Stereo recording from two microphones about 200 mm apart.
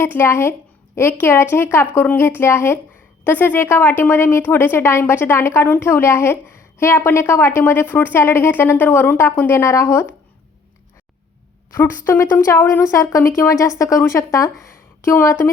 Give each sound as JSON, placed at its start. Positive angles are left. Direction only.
{"t": 0.0, "sound": "a woman's voice", "side_deg": 10}
{"t": 11.7, "sound": "a woman's voice", "side_deg": 10}